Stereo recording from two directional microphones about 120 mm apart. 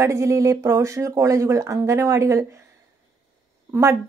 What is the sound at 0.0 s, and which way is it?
A woman's voice, 25° right (ahead or behind).